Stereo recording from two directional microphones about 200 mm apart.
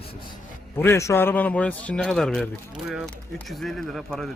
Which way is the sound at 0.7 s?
15° left (ahead or behind).